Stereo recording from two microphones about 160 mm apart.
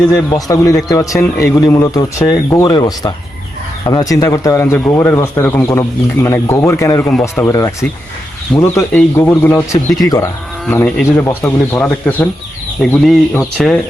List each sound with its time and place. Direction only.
0.1 s speech: 20° left (ahead or behind)
10.0 s speech: 25° left (ahead or behind)
10.7 s speech: 5° left (ahead or behind)